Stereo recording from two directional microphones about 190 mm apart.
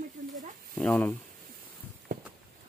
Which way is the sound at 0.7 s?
5° left (ahead or behind).